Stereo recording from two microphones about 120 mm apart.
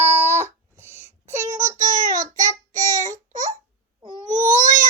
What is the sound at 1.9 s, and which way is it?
Child singing, 90° right.